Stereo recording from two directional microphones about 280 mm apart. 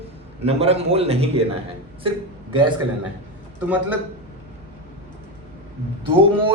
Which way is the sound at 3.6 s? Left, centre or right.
Centre.